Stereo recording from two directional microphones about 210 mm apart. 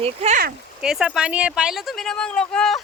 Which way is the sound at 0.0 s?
30° right (ahead or behind).